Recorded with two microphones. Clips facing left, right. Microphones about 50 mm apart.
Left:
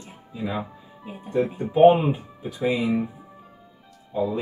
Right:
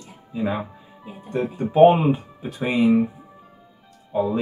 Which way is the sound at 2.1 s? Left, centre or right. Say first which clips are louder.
Right 4 dB; right.